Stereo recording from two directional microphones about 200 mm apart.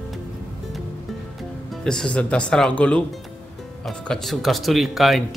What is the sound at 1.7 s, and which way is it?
Speech, 5° left (ahead or behind).